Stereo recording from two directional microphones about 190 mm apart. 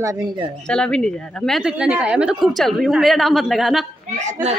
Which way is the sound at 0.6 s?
5° left (ahead or behind).